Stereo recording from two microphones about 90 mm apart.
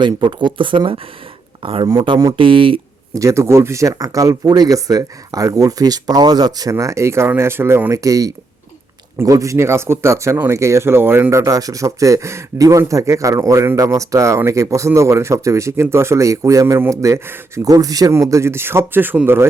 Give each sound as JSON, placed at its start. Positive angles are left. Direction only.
{"t": 0.0, "sound": "speech", "side_deg": -60}
{"t": 3.2, "sound": "speech", "side_deg": -35}